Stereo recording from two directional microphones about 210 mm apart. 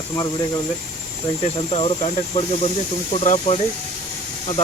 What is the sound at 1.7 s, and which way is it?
Speech, 30° left (ahead or behind).